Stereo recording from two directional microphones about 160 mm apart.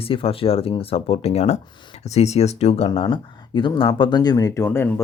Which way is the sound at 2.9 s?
30° left (ahead or behind).